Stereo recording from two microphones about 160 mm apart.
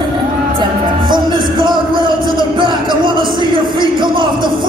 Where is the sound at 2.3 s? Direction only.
30° right (ahead or behind).